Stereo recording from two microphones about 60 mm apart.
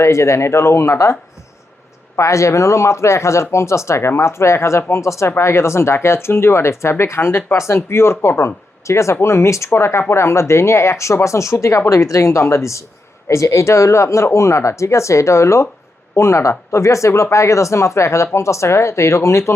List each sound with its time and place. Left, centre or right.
0.0 s speech: left
2.1 s speech: left